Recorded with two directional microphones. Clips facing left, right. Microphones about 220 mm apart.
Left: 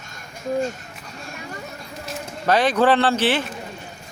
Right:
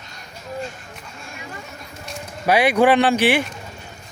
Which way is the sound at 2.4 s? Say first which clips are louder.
Right 2 dB; 10° right (ahead or behind).